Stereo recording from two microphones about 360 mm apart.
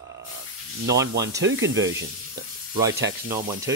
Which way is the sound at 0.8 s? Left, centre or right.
Right.